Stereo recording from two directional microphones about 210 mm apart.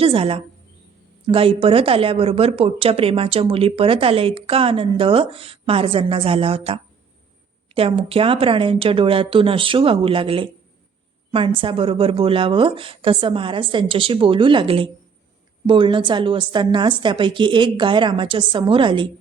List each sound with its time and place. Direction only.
0.0 s a woman's voice: 25° right (ahead or behind)